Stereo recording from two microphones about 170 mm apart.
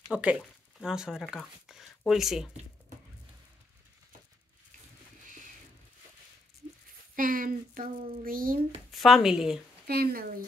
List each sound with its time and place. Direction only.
0.1 s speech: 5° right (ahead or behind)
7.2 s a child's voice: 55° right (ahead or behind)
8.9 s speech: centre (ahead or behind)
9.8 s a child's voice: 65° right (ahead or behind)